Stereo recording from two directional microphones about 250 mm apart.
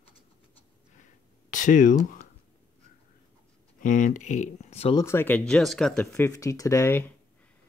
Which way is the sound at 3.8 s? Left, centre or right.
Left.